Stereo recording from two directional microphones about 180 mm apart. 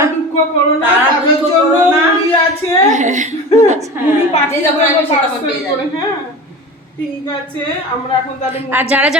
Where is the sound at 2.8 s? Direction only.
40° right (ahead or behind).